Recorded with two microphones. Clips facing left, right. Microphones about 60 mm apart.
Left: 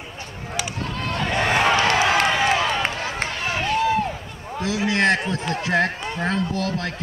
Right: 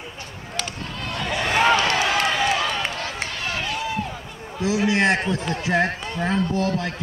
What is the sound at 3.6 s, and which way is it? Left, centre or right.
Run, left.